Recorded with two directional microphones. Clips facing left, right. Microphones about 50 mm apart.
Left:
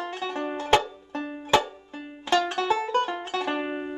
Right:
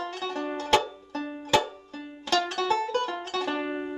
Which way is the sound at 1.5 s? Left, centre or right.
Left.